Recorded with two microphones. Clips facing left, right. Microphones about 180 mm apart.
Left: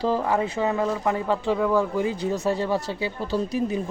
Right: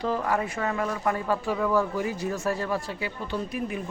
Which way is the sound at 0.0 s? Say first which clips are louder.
Left 4 dB; 25° left (ahead or behind).